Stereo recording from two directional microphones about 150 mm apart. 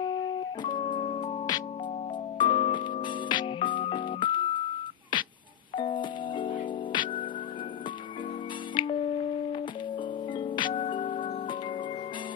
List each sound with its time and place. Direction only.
0.0 s music: 25° left (ahead or behind)
0.8 s music: 40° left (ahead or behind)
2.3 s music: 35° left (ahead or behind)
8.7 s music: 35° left (ahead or behind)